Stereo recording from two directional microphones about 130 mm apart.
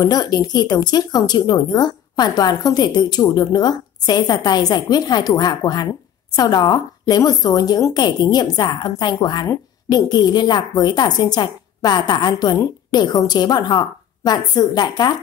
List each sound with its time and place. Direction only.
0.0 s a woman's voice: 30° left (ahead or behind)